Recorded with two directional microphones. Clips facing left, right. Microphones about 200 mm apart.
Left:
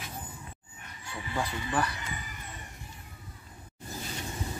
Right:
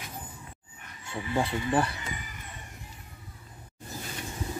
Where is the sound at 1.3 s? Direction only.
30° right (ahead or behind).